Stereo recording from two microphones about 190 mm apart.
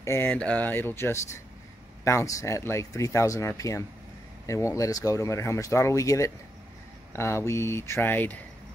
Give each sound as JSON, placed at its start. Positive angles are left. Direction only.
{"t": 0.0, "sound": "speech", "side_deg": 10}